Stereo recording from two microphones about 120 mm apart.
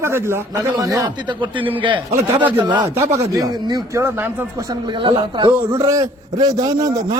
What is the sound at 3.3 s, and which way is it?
Speech, 30° right (ahead or behind).